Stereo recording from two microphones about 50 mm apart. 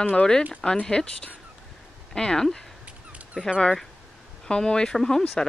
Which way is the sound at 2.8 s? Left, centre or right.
Right.